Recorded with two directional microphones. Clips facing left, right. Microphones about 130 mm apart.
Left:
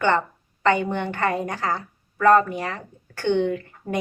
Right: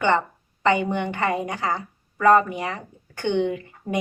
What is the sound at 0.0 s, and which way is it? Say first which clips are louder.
A woman's voice: even; 15° right (ahead or behind).